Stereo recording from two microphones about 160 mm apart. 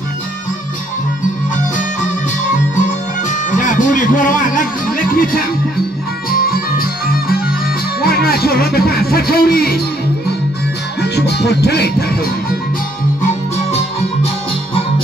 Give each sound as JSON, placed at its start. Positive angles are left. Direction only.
{"t": 3.3, "sound": "music", "side_deg": 50}
{"t": 11.0, "sound": "music", "side_deg": 90}
{"t": 13.7, "sound": "music", "side_deg": 40}